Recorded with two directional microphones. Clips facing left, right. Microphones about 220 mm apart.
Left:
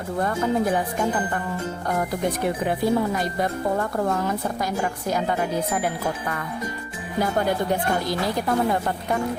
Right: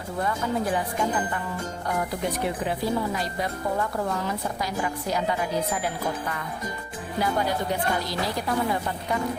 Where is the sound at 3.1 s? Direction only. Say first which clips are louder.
Left 4 dB; 50° left (ahead or behind).